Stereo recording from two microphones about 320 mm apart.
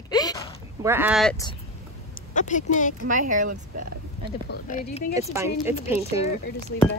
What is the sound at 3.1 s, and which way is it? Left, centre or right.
Speech, right.